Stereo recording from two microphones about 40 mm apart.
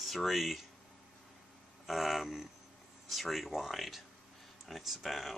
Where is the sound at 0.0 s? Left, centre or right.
Centre.